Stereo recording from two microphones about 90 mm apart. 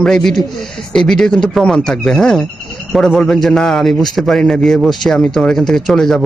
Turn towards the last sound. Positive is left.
turn(degrees=5)  # may be behind; listen again after turning